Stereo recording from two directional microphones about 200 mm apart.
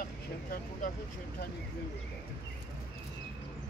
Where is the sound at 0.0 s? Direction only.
45° left (ahead or behind).